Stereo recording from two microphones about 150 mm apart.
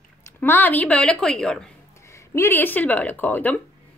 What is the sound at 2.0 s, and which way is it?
Speech, 20° left (ahead or behind).